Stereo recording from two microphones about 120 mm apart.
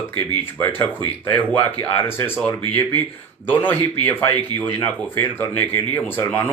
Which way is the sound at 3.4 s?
15° left (ahead or behind).